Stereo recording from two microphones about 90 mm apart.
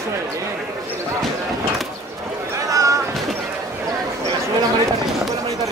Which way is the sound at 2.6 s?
40° right (ahead or behind).